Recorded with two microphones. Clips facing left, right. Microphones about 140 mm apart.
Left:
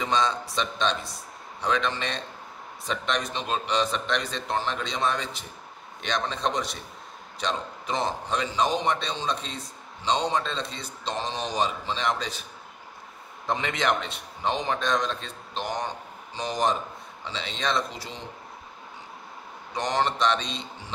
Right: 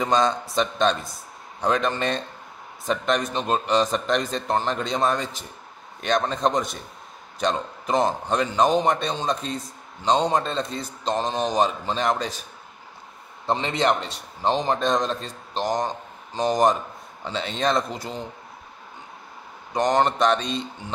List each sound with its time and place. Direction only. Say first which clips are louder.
0.0 s a man's voice: right 4 dB; 45° right (ahead or behind)
0.9 s speech: right 1 dB; centre (ahead or behind)
1.6 s a man's voice: right 4 dB; 45° right (ahead or behind)
13.5 s a man's voice: right 4 dB; 30° right (ahead or behind); by 18.1 s 50° right (ahead or behind)
19.7 s a man's voice: right 6 dB; 45° right (ahead or behind)